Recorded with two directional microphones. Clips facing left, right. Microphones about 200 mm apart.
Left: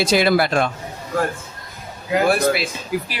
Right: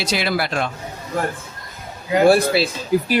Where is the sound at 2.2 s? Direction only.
30° right (ahead or behind).